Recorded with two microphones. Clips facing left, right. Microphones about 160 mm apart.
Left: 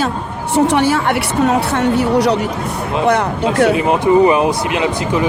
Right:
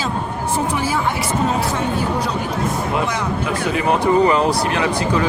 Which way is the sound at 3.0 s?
60° left (ahead or behind).